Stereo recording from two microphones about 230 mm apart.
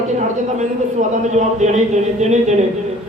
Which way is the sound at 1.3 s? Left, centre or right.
Right.